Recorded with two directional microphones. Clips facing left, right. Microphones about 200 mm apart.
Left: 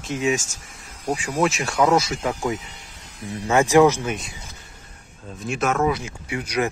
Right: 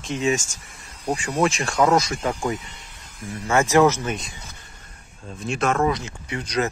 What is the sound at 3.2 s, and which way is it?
Speech, 35° left (ahead or behind).